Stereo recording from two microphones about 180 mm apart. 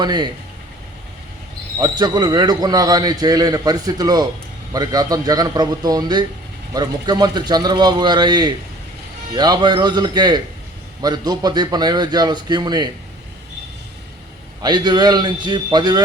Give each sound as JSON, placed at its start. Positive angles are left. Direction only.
{"t": 0.0, "sound": "a man's voice", "side_deg": -25}
{"t": 1.8, "sound": "a man's voice", "side_deg": -20}
{"t": 14.6, "sound": "a man's voice", "side_deg": -25}